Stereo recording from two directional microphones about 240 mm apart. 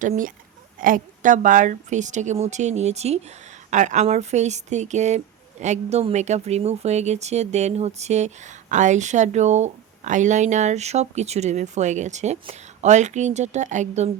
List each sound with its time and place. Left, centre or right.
0.0 s a woman's voice: right